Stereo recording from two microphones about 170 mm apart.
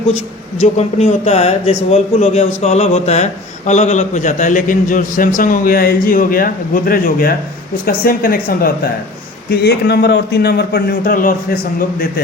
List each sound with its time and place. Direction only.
0.6 s a man's voice: 40° left (ahead or behind); by 8.9 s 60° left (ahead or behind)
9.5 s a man's voice: 70° left (ahead or behind); by 11.3 s 55° left (ahead or behind)